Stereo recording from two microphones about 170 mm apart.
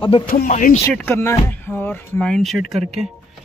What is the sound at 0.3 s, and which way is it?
Speech, 50° left (ahead or behind).